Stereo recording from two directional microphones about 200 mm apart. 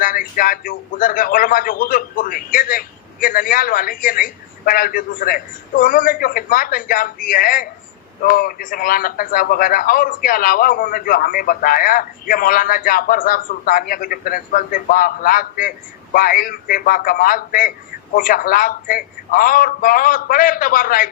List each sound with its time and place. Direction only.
0.0 s a man's voice: 45° left (ahead or behind)